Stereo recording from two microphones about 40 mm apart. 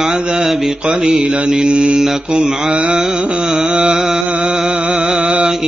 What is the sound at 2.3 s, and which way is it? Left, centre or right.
Mantra, centre.